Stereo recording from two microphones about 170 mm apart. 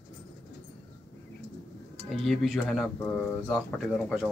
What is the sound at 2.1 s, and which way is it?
Speech, centre (ahead or behind).